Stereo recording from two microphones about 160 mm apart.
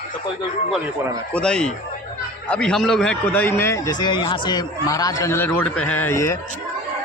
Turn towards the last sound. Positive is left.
turn(degrees=20)  # may be behind; listen again after turning